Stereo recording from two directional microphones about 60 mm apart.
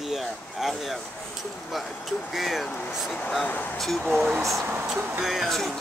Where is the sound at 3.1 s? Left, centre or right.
Left.